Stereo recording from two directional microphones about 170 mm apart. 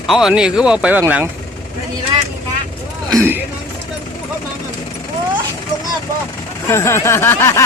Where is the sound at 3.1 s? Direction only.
15° right (ahead or behind).